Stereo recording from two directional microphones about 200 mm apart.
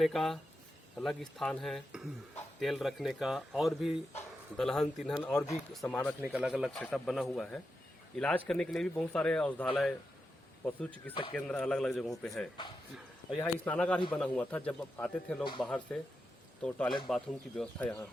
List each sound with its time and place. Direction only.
0.0 s speech: centre (ahead or behind)
6.2 s speech: 5° right (ahead or behind)
11.1 s speech: 25° left (ahead or behind)
11.3 s speech: 5° left (ahead or behind)